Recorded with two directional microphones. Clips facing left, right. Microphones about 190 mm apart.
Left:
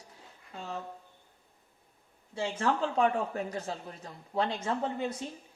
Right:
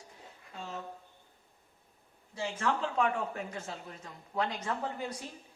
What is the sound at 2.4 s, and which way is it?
A man's voice, 30° left (ahead or behind).